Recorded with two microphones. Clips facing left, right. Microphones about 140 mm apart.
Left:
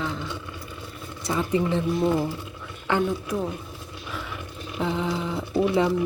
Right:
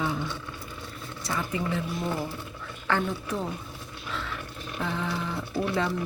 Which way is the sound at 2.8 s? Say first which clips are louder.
Left 4 dB; 15° left (ahead or behind).